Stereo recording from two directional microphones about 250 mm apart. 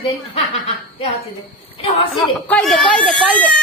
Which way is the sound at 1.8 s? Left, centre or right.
Left.